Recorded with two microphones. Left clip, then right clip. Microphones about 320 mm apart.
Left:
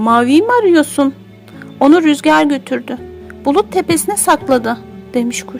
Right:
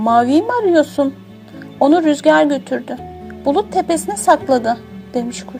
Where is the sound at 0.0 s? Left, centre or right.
Left.